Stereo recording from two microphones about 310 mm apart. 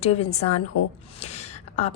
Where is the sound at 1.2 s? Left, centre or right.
Centre.